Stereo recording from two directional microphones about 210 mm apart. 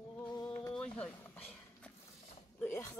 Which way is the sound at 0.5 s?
5° left (ahead or behind).